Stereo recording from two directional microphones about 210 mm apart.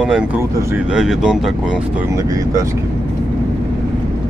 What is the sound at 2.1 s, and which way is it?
Speech, 15° right (ahead or behind).